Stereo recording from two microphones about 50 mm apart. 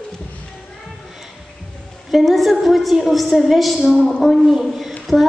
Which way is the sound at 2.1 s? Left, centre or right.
Centre.